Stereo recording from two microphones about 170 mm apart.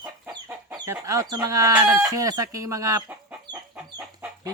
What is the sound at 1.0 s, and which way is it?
Speech, 20° right (ahead or behind).